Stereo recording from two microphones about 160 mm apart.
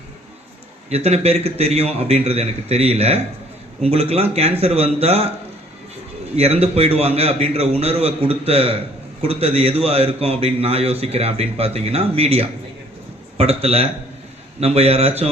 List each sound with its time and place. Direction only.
0.9 s a man's voice: 40° right (ahead or behind)
6.3 s a man's voice: 40° right (ahead or behind)